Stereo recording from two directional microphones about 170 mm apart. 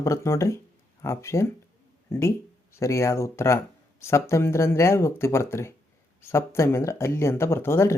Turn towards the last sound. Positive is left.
turn(degrees=15)  # may be behind; listen again after turning